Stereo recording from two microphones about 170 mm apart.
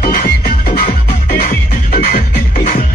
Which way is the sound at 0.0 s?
55° left (ahead or behind).